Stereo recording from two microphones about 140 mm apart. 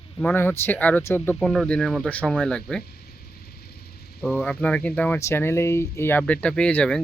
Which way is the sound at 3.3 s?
90° left.